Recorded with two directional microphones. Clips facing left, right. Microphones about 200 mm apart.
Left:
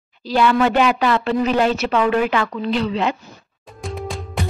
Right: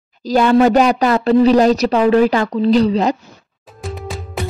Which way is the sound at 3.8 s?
Centre (ahead or behind).